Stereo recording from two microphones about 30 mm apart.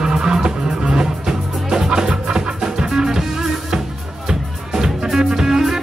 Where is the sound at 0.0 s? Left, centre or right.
Right.